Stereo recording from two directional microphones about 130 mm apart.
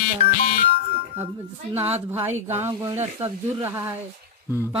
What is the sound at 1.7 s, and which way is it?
Speech, 15° right (ahead or behind).